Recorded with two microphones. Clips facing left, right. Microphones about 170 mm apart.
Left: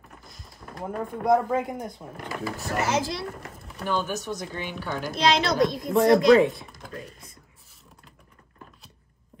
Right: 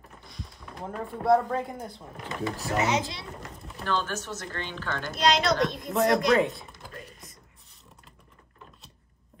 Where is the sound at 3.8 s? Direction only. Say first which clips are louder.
Left 2 dB; 10° left (ahead or behind).